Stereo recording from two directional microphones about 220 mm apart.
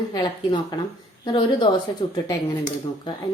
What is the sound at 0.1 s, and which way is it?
Speech, 20° left (ahead or behind).